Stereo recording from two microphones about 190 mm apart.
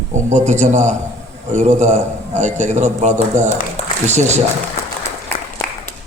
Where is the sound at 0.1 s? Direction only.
35° right (ahead or behind).